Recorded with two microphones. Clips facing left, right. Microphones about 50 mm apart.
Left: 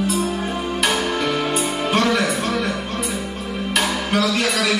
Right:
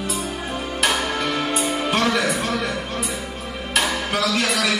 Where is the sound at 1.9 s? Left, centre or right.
Centre.